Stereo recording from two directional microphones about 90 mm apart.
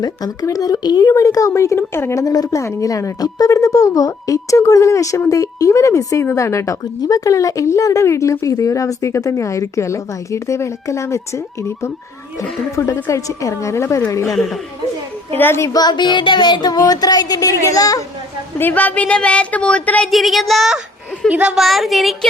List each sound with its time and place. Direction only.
0.0 s a woman's voice: 40° left (ahead or behind)
12.4 s a woman's voice: 35° left (ahead or behind)
14.3 s speech: centre (ahead or behind)
15.4 s a woman's voice: 25° left (ahead or behind)
15.7 s a sound: 50° left (ahead or behind)
18.6 s a woman's voice: 20° left (ahead or behind)
20.1 s speech: centre (ahead or behind)
21.2 s a woman's voice: 15° right (ahead or behind)
21.5 s speech: centre (ahead or behind)